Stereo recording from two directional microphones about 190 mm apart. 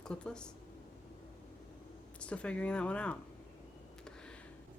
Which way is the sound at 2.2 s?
5° left (ahead or behind).